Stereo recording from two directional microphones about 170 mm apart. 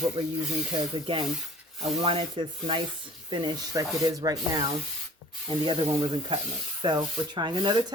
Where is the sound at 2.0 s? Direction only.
30° right (ahead or behind).